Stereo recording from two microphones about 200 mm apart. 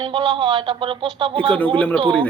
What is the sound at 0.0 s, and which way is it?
A woman's voice, 25° right (ahead or behind).